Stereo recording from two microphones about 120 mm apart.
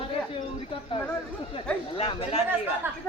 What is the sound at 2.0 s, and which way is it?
Speech, 60° left (ahead or behind).